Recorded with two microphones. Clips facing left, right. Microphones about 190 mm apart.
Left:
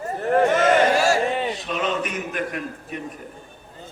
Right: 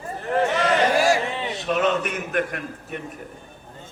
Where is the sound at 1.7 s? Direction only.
55° right (ahead or behind).